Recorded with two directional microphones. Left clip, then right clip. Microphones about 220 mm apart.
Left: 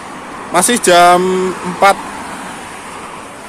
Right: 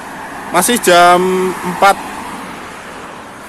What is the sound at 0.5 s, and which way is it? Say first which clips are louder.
Speech: even; centre (ahead or behind).